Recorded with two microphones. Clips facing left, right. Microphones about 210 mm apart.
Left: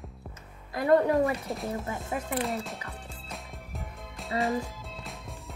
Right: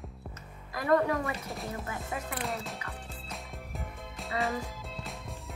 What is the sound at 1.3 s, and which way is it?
Speech, centre (ahead or behind).